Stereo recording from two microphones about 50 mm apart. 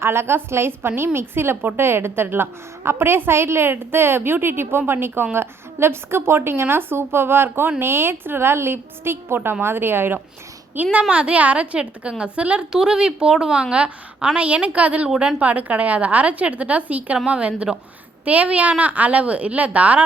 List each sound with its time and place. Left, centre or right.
0.0 s a woman's voice: right
11.1 s a woman's voice: right
12.7 s a woman's voice: centre